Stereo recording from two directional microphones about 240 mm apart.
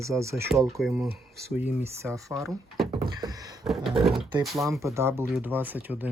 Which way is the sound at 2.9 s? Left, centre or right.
Centre.